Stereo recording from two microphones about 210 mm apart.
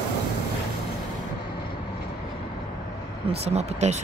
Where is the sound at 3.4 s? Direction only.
30° right (ahead or behind).